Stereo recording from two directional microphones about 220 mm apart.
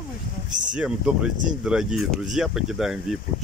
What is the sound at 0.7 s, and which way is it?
Speech, 5° right (ahead or behind).